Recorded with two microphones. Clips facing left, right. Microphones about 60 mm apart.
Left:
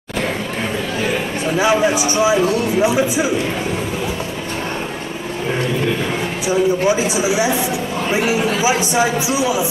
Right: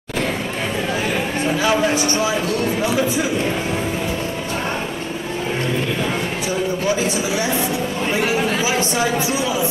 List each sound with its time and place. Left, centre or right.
1.6 s a man's voice: centre
6.9 s a man's voice: centre